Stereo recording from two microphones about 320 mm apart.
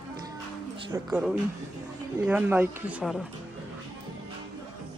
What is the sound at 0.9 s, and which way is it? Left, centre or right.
Speech, centre.